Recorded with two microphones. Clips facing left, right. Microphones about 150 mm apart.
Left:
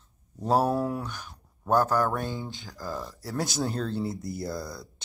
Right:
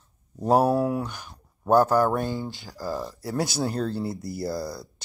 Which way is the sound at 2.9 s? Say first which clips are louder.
Right 4 dB; 15° right (ahead or behind).